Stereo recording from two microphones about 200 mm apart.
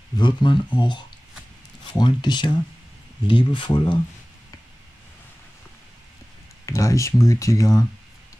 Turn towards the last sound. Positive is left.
turn(degrees=15)  # may be behind; listen again after turning